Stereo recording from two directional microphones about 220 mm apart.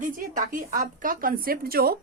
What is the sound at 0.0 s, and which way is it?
A woman's voice, 35° right (ahead or behind).